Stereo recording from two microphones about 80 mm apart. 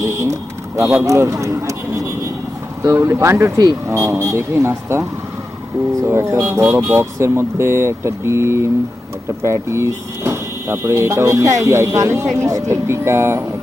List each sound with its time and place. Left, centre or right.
0.0 s a sound: right
1.0 s speech: right
6.1 s speech: right